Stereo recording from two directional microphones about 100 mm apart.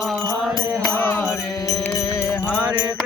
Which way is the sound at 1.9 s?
30° left (ahead or behind).